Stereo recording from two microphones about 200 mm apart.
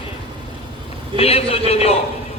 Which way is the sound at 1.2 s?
30° left (ahead or behind).